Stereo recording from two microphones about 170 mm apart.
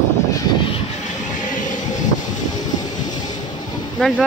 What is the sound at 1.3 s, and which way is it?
Train, 50° left (ahead or behind).